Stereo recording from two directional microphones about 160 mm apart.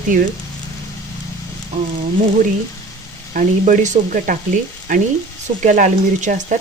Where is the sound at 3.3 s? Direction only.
50° right (ahead or behind).